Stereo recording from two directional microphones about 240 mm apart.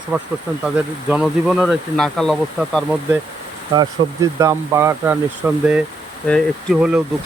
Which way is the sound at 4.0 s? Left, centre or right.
Right.